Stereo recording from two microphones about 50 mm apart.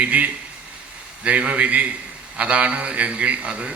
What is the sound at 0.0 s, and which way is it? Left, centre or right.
A man's voice, right.